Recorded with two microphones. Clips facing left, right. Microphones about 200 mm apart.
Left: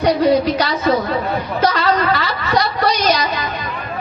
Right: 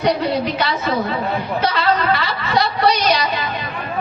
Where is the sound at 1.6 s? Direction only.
40° left (ahead or behind).